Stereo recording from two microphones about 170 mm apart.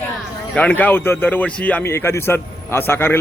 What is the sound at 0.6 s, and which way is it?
A man's voice, 10° left (ahead or behind).